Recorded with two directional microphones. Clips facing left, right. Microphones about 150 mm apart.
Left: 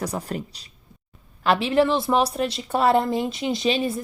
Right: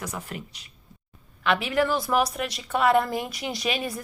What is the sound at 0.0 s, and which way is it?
A woman's voice, 35° left (ahead or behind).